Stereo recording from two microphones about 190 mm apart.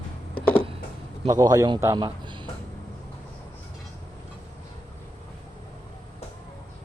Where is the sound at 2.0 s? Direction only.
25° right (ahead or behind).